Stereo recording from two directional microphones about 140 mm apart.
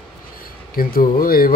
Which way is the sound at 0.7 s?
90° left.